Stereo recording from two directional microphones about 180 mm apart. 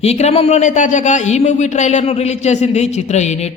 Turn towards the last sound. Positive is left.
turn(degrees=40)  # may be behind; listen again after turning